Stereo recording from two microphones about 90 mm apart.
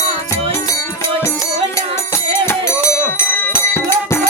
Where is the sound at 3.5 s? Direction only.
25° left (ahead or behind).